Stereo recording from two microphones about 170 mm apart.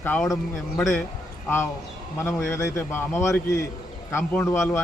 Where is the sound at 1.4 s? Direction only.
15° left (ahead or behind).